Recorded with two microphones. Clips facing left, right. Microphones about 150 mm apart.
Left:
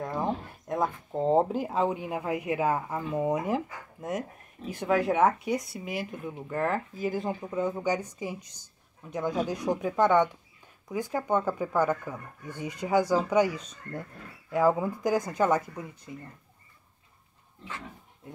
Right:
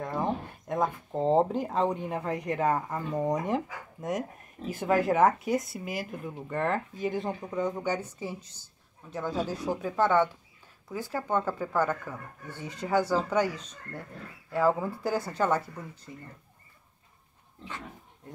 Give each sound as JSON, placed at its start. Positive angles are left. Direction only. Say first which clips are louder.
{"t": 0.0, "sound": "speech", "louder": "even", "side_deg": 0}